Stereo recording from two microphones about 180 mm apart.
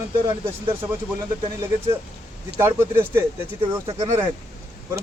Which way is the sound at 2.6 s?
15° right (ahead or behind).